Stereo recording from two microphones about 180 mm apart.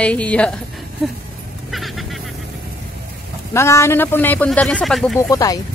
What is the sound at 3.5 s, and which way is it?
A man's voice, 15° left (ahead or behind).